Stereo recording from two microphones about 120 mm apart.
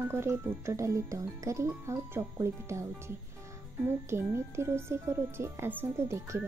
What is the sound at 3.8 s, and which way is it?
Speech, 20° right (ahead or behind).